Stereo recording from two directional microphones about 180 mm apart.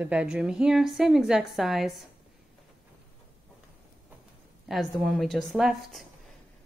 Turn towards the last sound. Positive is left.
turn(degrees=0)  # may be behind; listen again after turning